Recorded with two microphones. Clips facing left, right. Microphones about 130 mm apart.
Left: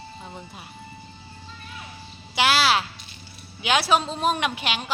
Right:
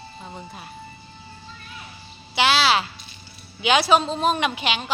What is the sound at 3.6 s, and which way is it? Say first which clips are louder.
A woman's voice: right 3 dB; 5° left (ahead or behind).